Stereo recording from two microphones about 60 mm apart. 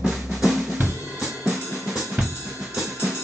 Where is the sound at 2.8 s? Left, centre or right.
Centre.